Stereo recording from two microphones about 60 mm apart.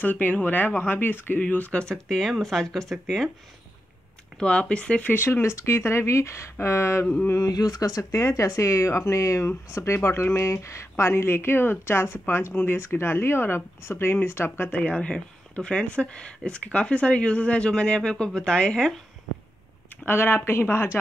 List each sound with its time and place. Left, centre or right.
0.0 s speech: left
1.8 s speech: centre
4.4 s speech: centre
5.1 s speech: left
7.3 s speech: left
9.9 s speech: left
14.8 s speech: centre
20.1 s speech: left